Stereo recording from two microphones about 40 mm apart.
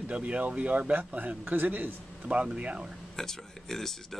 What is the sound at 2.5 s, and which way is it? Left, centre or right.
Speech, right.